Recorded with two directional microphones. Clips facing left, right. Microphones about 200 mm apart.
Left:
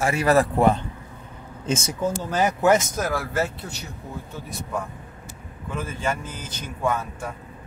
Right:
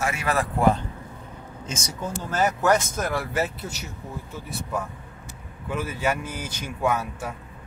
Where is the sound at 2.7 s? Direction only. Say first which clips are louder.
Left 2 dB; 5° left (ahead or behind).